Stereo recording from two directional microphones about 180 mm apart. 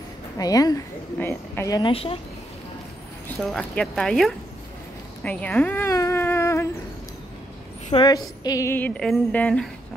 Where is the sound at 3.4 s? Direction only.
5° left (ahead or behind).